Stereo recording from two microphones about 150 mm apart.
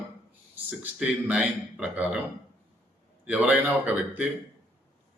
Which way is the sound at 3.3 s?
10° right (ahead or behind).